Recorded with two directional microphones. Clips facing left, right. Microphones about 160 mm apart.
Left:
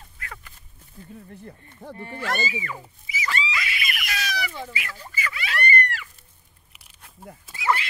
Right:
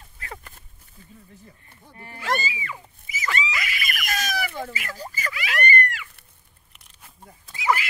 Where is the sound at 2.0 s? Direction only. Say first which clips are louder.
Right 1 dB; 35° left (ahead or behind).